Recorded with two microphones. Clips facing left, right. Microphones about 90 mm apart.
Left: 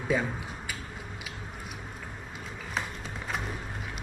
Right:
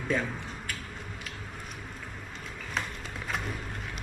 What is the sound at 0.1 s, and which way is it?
Speech, 5° left (ahead or behind).